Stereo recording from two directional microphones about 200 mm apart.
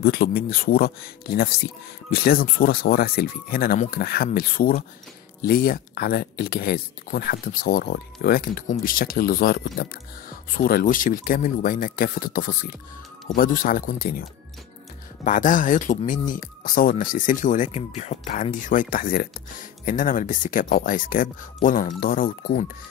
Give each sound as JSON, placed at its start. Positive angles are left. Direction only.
{"t": 0.0, "sound": "speech", "side_deg": 50}
{"t": 15.2, "sound": "speech", "side_deg": 40}